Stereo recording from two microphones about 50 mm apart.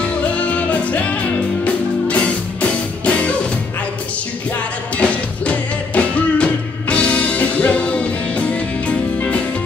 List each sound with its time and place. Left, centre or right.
0.0 s music: left
4.9 s music: left